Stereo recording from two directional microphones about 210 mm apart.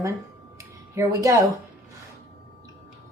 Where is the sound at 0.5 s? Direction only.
15° right (ahead or behind).